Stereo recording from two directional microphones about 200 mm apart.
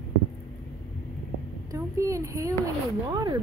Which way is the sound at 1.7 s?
15° right (ahead or behind).